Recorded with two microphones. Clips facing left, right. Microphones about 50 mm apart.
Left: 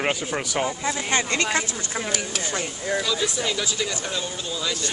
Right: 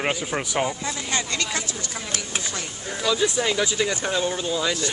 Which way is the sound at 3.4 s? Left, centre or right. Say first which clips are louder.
Right 3 dB; centre.